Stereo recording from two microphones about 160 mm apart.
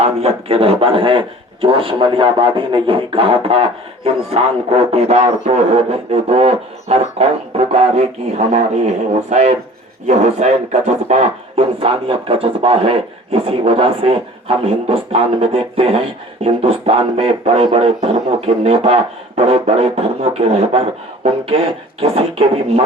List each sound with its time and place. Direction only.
0.0 s speech: 40° right (ahead or behind)
22.0 s speech: 40° right (ahead or behind)